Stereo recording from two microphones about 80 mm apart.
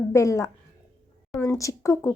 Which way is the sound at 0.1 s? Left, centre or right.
Left.